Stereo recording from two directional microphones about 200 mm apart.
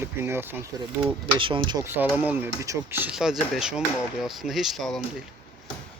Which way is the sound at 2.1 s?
10° right (ahead or behind).